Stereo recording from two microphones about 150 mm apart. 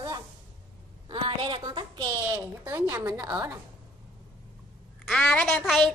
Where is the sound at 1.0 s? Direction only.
35° right (ahead or behind).